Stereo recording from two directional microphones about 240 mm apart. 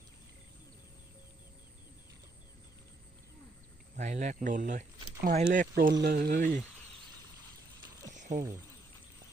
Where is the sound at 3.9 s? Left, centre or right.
Right.